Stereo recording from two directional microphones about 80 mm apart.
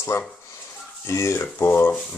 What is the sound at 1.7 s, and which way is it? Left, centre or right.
Stir, left.